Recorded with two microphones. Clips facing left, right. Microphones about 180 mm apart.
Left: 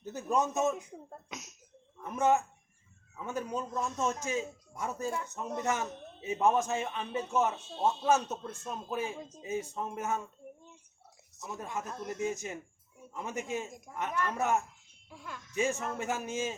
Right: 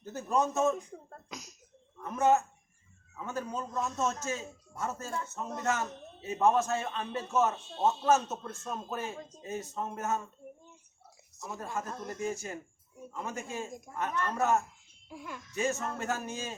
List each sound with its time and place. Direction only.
0.0 s speech: 15° left (ahead or behind)
2.1 s speech: 15° left (ahead or behind)
3.8 s a man's voice: centre (ahead or behind)
4.0 s speech: 15° left (ahead or behind)
11.3 s a woman's voice: centre (ahead or behind)
11.6 s a man's voice: 20° left (ahead or behind)
15.1 s speech: 10° right (ahead or behind)
15.5 s speech: 15° left (ahead or behind)